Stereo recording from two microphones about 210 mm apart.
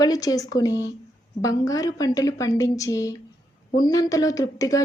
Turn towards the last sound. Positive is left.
turn(degrees=15)  # may be behind; listen again after turning